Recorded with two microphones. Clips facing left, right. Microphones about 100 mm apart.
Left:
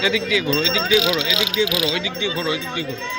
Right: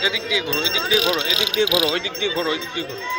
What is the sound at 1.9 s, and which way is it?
Speech, 45° right (ahead or behind).